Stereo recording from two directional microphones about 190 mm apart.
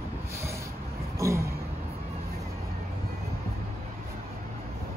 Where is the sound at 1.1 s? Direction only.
15° right (ahead or behind).